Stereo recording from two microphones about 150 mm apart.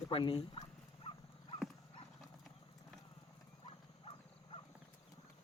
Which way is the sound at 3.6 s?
35° left (ahead or behind).